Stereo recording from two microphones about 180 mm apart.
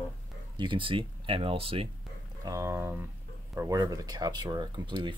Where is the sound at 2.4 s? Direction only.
15° right (ahead or behind).